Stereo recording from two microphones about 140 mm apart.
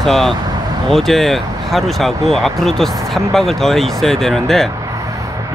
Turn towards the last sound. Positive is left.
turn(degrees=5)  # may be behind; listen again after turning